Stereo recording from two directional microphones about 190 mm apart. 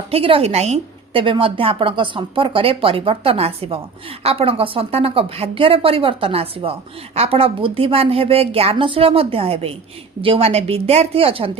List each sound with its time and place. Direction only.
0.1 s a woman's voice: 30° right (ahead or behind)